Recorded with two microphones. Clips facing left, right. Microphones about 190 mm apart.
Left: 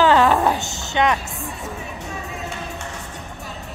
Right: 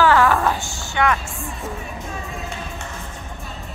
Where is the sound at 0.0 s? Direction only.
20° left (ahead or behind).